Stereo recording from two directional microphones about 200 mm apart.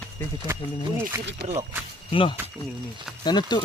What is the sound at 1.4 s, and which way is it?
Speech, 55° right (ahead or behind).